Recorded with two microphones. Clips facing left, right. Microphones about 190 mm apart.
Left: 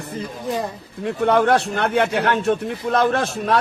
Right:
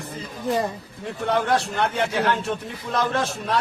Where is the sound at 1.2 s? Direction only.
60° left (ahead or behind).